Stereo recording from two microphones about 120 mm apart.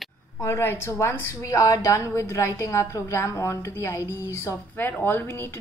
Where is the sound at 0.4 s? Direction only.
20° left (ahead or behind).